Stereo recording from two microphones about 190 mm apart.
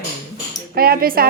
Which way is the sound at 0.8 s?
50° right (ahead or behind).